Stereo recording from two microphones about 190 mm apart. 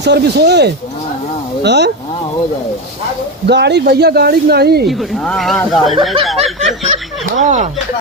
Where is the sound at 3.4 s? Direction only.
65° right (ahead or behind).